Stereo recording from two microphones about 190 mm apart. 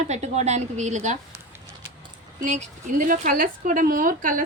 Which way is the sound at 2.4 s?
40° right (ahead or behind).